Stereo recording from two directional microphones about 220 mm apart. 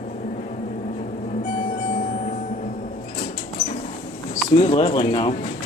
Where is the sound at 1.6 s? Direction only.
30° left (ahead or behind).